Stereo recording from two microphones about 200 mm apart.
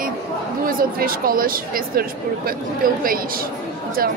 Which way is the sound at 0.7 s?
45° right (ahead or behind).